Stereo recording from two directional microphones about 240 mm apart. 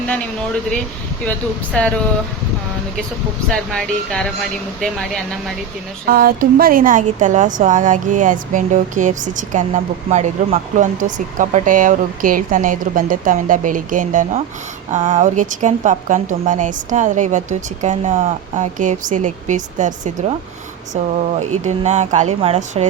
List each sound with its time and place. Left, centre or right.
3.5 s speech: centre
6.1 s a woman's voice: right